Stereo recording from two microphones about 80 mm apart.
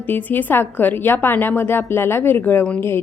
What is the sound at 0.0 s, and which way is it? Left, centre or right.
A woman's voice, left.